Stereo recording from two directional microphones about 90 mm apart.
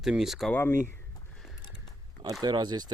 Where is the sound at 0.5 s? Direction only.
25° left (ahead or behind).